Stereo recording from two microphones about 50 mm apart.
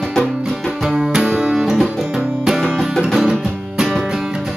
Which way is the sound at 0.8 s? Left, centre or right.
Centre.